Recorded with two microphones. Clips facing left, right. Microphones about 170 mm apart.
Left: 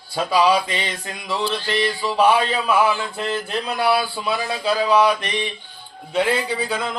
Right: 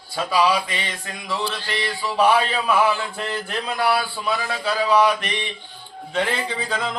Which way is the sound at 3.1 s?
20° left (ahead or behind).